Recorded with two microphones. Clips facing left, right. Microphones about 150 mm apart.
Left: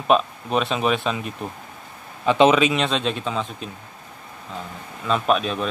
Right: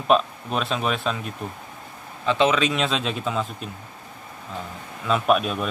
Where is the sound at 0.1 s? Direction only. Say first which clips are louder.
Left 1 dB; centre (ahead or behind).